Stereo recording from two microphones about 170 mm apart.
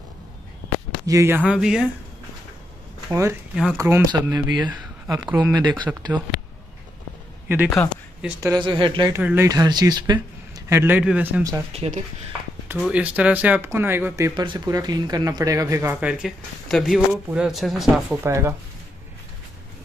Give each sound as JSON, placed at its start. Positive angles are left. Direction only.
{"t": 1.0, "sound": "speech", "side_deg": -15}
{"t": 3.1, "sound": "speech", "side_deg": -15}
{"t": 5.2, "sound": "speech", "side_deg": -10}
{"t": 5.5, "sound": "speech", "side_deg": -25}
{"t": 7.4, "sound": "a man's voice", "side_deg": -10}
{"t": 8.4, "sound": "speech", "side_deg": -25}
{"t": 9.1, "sound": "speech", "side_deg": -15}
{"t": 11.7, "sound": "speech", "side_deg": -40}
{"t": 12.6, "sound": "speech", "side_deg": -5}
{"t": 18.2, "sound": "speech", "side_deg": -15}